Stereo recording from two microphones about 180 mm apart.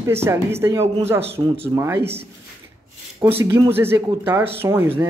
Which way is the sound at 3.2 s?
15° right (ahead or behind).